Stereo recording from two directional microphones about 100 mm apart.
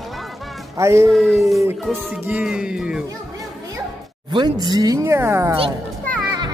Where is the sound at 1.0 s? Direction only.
Centre (ahead or behind).